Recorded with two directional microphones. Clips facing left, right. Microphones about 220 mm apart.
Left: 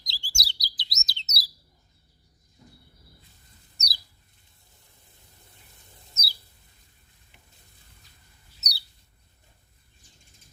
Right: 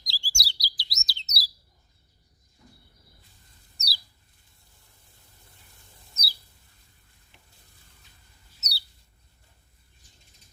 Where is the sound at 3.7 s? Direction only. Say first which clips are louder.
Right 1 dB; 20° left (ahead or behind).